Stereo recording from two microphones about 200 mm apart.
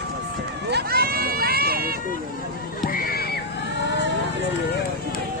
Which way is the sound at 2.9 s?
50° left (ahead or behind).